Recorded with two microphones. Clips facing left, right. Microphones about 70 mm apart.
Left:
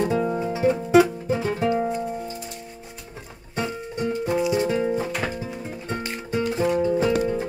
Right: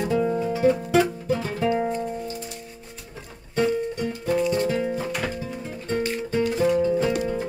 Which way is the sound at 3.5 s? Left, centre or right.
Centre.